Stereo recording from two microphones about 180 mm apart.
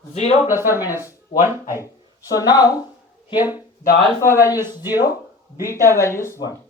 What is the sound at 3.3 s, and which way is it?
Speech, 10° right (ahead or behind).